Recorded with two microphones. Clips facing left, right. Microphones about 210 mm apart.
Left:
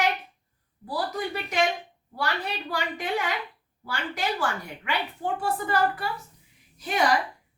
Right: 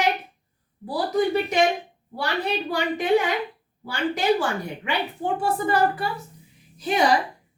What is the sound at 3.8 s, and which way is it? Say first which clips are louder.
A woman's voice: right 6 dB; 20° right (ahead or behind).